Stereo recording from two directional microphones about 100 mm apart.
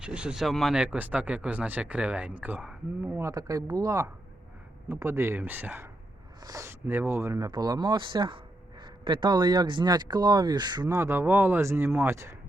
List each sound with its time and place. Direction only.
0.0 s speech: 10° right (ahead or behind)
0.8 s speech: 15° right (ahead or behind)
3.2 s speech: 35° right (ahead or behind)
6.4 s speech: 35° right (ahead or behind)
6.7 s speech: 20° right (ahead or behind); by 10.8 s 45° right (ahead or behind)
10.8 s speech: 25° right (ahead or behind)